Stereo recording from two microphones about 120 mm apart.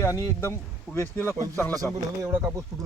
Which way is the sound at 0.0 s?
25° left (ahead or behind).